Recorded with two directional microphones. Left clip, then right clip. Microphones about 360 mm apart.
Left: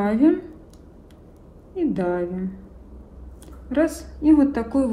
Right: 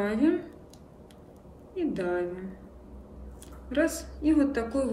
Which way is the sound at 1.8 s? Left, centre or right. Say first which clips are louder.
Left 6 dB; centre.